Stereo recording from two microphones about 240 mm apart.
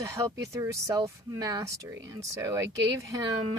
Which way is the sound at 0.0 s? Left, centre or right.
Centre.